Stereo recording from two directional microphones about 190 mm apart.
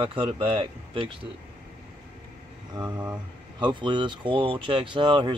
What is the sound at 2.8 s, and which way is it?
Speech, 20° right (ahead or behind).